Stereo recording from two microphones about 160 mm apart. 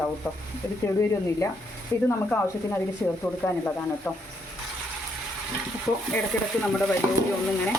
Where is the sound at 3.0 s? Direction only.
10° left (ahead or behind).